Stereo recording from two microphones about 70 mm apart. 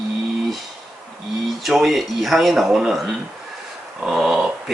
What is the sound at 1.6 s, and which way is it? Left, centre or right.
Speech, centre.